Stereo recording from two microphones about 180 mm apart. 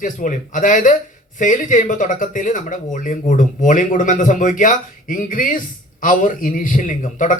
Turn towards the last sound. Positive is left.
turn(degrees=45)  # may be behind; listen again after turning